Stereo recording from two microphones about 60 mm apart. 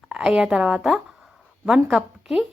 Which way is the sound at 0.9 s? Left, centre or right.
Centre.